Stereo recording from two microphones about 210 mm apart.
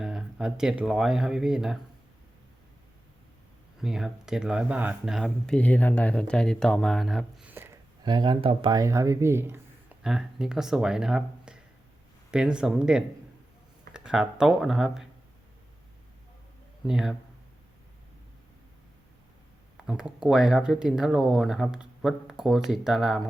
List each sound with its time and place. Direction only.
0.0 s speech: 5° right (ahead or behind)
3.8 s speech: centre (ahead or behind)
8.0 s speech: 20° right (ahead or behind); by 15.0 s centre (ahead or behind)
16.8 s speech: centre (ahead or behind)
19.7 s speech: centre (ahead or behind)